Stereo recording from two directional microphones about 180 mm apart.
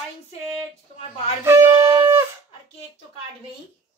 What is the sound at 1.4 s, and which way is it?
Wind instrument, 15° right (ahead or behind).